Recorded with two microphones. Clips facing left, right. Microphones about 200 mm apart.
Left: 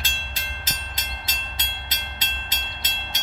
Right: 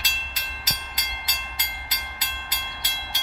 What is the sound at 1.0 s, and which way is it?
Train, 25° left (ahead or behind).